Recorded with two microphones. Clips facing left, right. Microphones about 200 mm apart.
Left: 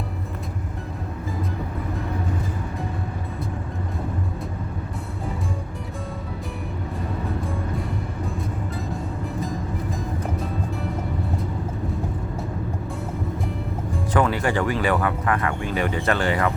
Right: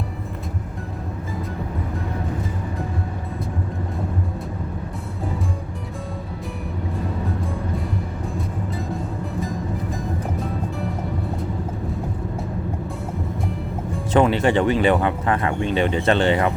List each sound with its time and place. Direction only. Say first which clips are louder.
14.1 s speech: right 5 dB; 25° right (ahead or behind)